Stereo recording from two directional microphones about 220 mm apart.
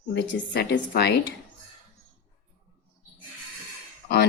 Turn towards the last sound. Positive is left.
turn(degrees=45)  # may be behind; listen again after turning